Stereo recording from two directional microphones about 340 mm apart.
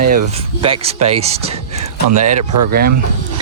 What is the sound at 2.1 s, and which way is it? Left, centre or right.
Speech, right.